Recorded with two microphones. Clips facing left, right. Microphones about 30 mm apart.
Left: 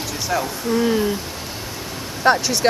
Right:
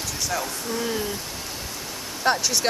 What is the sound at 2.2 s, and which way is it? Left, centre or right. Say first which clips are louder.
Speech: left 5 dB; centre.